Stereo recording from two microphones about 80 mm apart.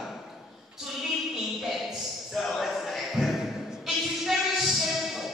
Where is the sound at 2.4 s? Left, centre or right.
Centre.